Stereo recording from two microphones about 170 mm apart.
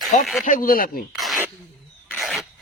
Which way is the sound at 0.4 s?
55° left (ahead or behind).